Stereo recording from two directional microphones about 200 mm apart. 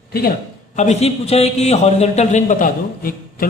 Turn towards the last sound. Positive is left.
turn(degrees=45)  # may be behind; listen again after turning